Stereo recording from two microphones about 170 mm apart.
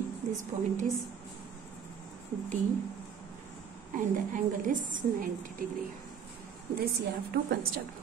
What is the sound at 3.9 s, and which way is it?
A woman's voice, 50° right (ahead or behind).